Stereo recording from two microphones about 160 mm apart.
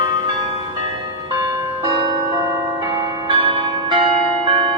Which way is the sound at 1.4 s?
25° right (ahead or behind).